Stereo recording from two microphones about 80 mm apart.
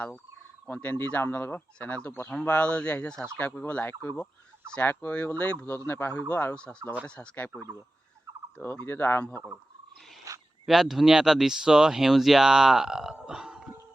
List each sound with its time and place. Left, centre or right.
0.7 s speech: left
10.3 s a sound: right
10.7 s speech: centre